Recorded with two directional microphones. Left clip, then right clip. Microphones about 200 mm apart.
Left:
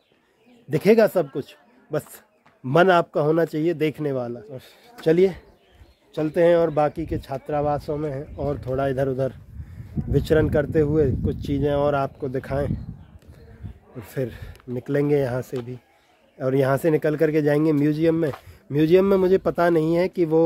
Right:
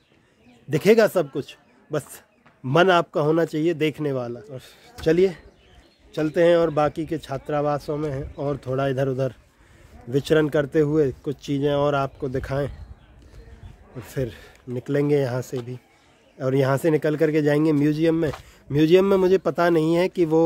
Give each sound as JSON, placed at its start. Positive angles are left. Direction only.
{"t": 0.7, "sound": "speech", "side_deg": -10}
{"t": 4.9, "sound": "speech", "side_deg": 5}
{"t": 14.0, "sound": "speech", "side_deg": -5}